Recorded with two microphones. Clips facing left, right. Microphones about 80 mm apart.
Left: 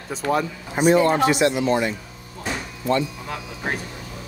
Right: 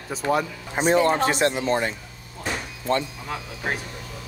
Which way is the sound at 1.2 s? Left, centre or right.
Right.